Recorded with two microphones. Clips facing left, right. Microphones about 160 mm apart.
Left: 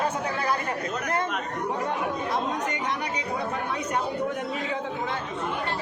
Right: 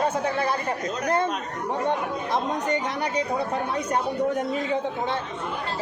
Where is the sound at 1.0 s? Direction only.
30° right (ahead or behind).